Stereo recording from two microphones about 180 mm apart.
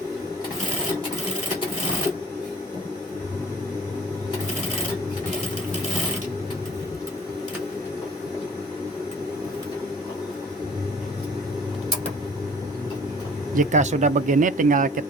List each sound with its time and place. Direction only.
13.6 s speech: 45° right (ahead or behind)